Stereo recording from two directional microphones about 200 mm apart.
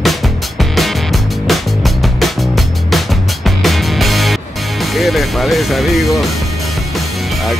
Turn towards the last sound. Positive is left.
turn(degrees=0)  # may be behind; listen again after turning